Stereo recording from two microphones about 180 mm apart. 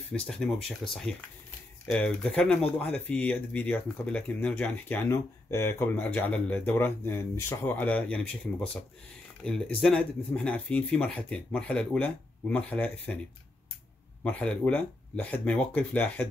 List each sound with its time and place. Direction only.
0.1 s speech: 5° left (ahead or behind)
14.2 s speech: 10° left (ahead or behind)